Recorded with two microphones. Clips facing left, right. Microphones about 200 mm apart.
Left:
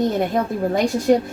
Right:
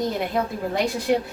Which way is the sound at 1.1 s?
40° left (ahead or behind).